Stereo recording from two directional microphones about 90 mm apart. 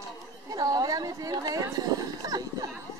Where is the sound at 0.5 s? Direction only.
45° right (ahead or behind).